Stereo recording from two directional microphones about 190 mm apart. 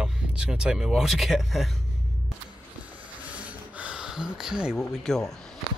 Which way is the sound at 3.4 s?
5° right (ahead or behind).